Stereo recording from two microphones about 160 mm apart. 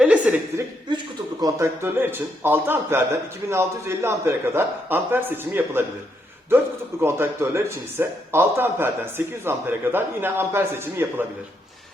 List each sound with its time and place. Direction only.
0.0 s chuckle: 10° right (ahead or behind)
1.4 s a man's voice: 20° right (ahead or behind)
7.0 s a man's voice: 15° right (ahead or behind)